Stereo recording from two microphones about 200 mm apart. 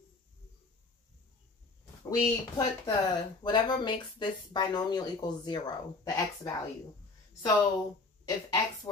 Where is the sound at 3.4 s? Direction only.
20° left (ahead or behind).